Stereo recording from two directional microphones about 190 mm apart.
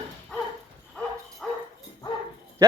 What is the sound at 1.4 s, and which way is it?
Dog, centre (ahead or behind).